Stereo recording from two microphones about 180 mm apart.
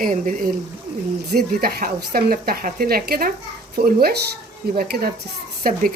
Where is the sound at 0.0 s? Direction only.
50° right (ahead or behind).